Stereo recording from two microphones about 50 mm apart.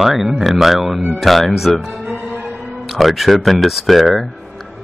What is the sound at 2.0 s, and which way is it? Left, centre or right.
Music, right.